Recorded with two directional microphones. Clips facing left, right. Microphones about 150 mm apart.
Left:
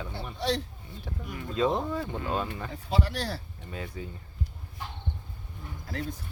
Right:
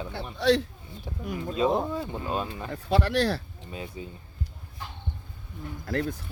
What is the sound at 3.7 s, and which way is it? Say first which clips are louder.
Speech: right 1 dB; 20° right (ahead or behind).